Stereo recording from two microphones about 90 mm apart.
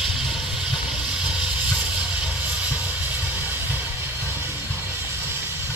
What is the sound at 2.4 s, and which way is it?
Vehicle, 20° right (ahead or behind).